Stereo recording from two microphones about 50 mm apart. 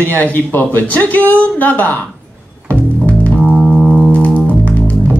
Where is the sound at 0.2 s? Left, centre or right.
Left.